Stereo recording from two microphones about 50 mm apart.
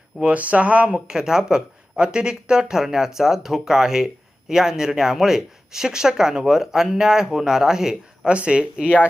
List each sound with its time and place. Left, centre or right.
0.2 s speech: right; by 8.3 s centre
8.3 s speech: right